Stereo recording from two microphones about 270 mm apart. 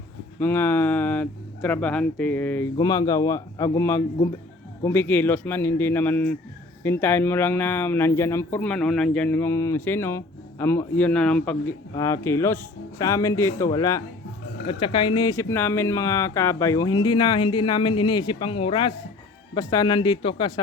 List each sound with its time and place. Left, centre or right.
0.3 s speech: centre